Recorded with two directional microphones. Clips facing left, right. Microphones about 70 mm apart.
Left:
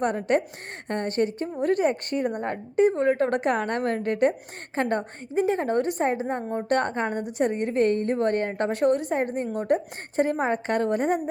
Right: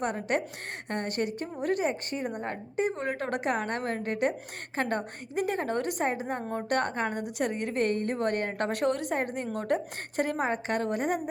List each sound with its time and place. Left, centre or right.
0.0 s a woman's voice: left
2.8 s a woman's voice: left
6.4 s a woman's voice: centre
6.7 s a woman's voice: left